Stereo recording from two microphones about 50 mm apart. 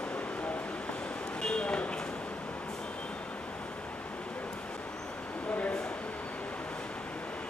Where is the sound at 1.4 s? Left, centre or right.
Centre.